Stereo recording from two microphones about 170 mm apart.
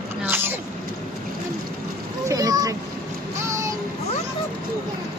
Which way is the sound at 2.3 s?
20° right (ahead or behind).